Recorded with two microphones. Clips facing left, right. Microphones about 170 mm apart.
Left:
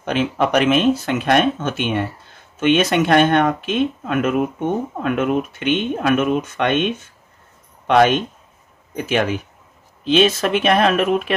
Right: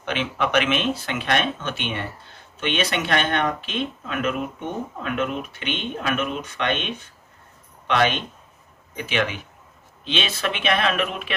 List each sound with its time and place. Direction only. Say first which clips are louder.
0.0 s speech: left 6 dB; 40° left (ahead or behind)
7.8 s speech: left 7 dB; 45° left (ahead or behind)